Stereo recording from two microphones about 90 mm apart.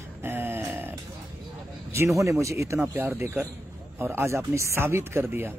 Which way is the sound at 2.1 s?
35° right (ahead or behind).